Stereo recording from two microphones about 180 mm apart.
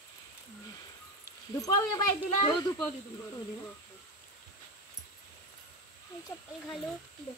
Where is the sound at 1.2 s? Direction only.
20° left (ahead or behind).